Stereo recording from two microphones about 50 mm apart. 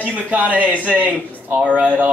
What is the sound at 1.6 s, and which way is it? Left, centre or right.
Speech, right.